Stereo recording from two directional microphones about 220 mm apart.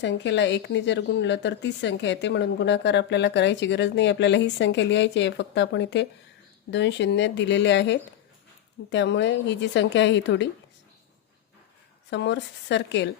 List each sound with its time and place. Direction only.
0.0 s speech: 55° left (ahead or behind)
12.1 s speech: 55° left (ahead or behind)